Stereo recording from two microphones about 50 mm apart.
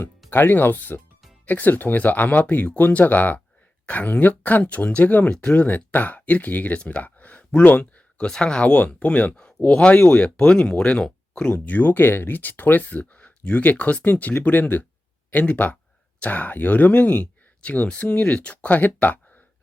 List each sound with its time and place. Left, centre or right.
0.3 s speech: left
5.3 s speech: centre
5.5 s speech: left
8.3 s speech: centre
9.3 s speech: centre; by 19.2 s left